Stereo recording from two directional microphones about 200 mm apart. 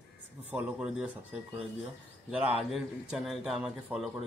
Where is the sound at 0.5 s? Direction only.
5° right (ahead or behind).